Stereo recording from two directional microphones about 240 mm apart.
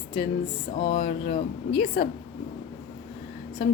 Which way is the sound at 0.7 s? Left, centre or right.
Centre.